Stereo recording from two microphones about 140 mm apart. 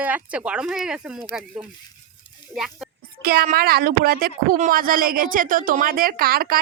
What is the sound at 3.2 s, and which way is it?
Speech, 90° right.